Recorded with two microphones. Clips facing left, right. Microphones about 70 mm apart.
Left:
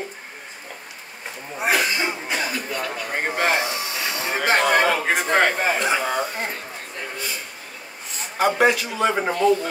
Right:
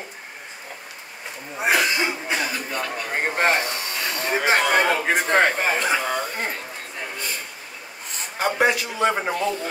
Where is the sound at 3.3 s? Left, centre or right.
Right.